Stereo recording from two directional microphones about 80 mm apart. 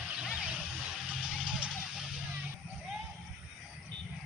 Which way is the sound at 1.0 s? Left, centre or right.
Centre.